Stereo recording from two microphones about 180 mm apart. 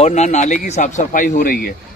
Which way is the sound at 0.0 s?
40° left (ahead or behind).